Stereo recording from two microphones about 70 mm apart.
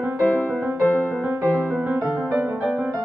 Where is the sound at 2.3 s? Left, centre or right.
Right.